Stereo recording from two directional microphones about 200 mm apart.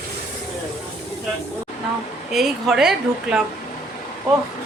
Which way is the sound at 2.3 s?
Centre (ahead or behind).